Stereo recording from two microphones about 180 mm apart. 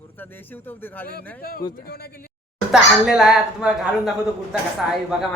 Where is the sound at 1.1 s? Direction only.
55° left (ahead or behind).